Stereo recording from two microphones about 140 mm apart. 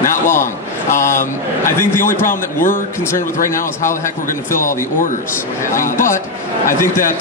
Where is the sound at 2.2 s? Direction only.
75° left (ahead or behind).